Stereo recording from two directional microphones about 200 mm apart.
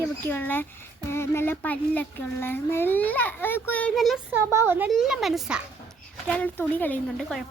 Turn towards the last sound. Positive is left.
turn(degrees=0)  # may be behind; listen again after turning